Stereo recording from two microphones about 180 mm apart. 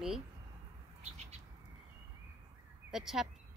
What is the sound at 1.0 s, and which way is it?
Bird, 40° right (ahead or behind).